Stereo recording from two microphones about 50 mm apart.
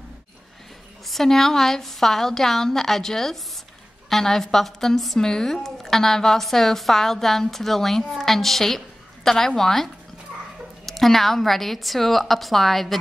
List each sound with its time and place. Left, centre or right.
1.0 s a woman's voice: centre
10.9 s a woman's voice: centre